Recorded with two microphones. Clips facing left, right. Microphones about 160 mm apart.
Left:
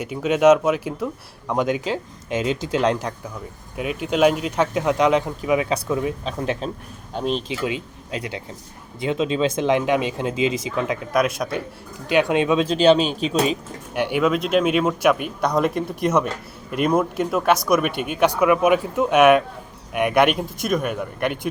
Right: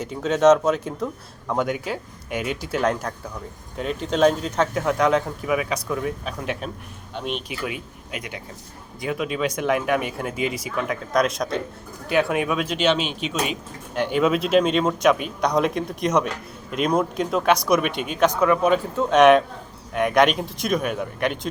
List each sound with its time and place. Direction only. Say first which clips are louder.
0.0 s speech: left 1 dB; 10° left (ahead or behind)
1.5 s speech: left 3 dB; 20° left (ahead or behind)
6.4 s speech: left 5 dB; 30° left (ahead or behind)
11.1 s speech: right 1 dB; 5° left (ahead or behind)
12.0 s speech: left 3 dB; 20° left (ahead or behind)
13.9 s speech: left 1 dB; 15° left (ahead or behind)
14.2 s speech: right 1 dB; centre (ahead or behind)
17.9 s speech: left 2 dB; 60° left (ahead or behind)
18.3 s speech: left 3 dB; 10° left (ahead or behind)